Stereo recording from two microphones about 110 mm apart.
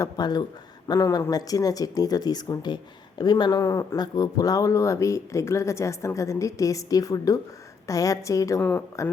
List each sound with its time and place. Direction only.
0.0 s speech: 40° left (ahead or behind)
3.6 s speech: 30° left (ahead or behind)